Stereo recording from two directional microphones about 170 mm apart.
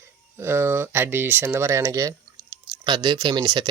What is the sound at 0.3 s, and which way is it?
Speech, 15° right (ahead or behind).